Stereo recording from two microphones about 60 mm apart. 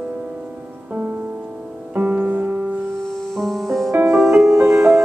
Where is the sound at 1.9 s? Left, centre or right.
Right.